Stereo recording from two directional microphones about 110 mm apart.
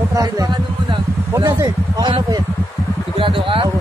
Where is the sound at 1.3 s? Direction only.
30° right (ahead or behind).